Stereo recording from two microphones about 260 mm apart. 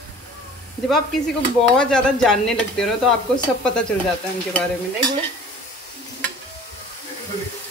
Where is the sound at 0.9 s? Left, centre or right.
Centre.